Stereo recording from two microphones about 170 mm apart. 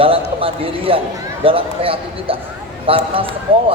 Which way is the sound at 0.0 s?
35° right (ahead or behind).